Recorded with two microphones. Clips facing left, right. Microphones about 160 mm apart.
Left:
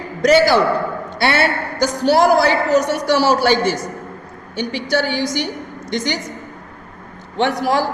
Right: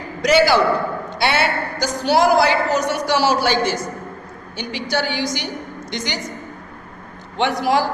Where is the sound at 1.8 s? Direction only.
50° left (ahead or behind).